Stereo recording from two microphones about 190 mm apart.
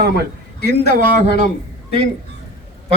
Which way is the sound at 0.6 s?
60° left (ahead or behind).